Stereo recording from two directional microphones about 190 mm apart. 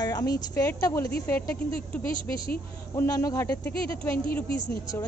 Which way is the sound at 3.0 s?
15° left (ahead or behind).